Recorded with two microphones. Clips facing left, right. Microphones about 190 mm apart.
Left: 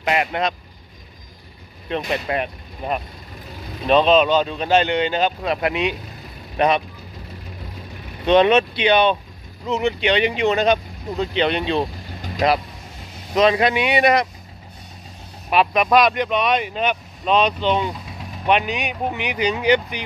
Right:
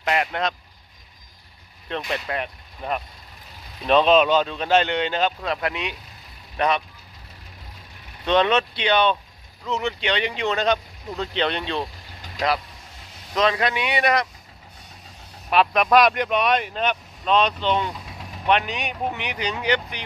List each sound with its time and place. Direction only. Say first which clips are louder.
0.0 s speech: left 3 dB; 5° left (ahead or behind)
1.9 s speech: left 5 dB; 15° left (ahead or behind)
3.8 s speech: left 2 dB; centre (ahead or behind); by 6.8 s 20° left (ahead or behind)
8.3 s speech: left 5 dB; 15° left (ahead or behind)
15.5 s speech: left 1 dB; 5° left (ahead or behind)